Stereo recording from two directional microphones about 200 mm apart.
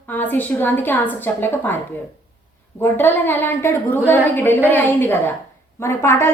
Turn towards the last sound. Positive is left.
turn(degrees=10)  # may be behind; listen again after turning